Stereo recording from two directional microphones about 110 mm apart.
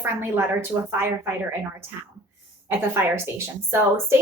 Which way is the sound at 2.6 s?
20° right (ahead or behind).